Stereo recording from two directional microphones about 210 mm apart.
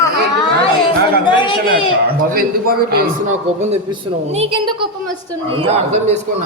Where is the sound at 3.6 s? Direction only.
30° right (ahead or behind).